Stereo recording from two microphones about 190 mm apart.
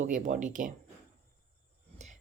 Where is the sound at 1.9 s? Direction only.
35° right (ahead or behind).